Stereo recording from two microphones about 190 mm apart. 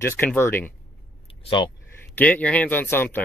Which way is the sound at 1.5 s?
25° left (ahead or behind).